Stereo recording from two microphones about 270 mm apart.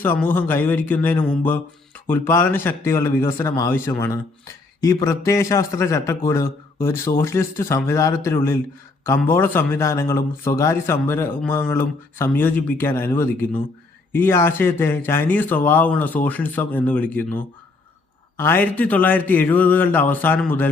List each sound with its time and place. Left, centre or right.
0.0 s speech: centre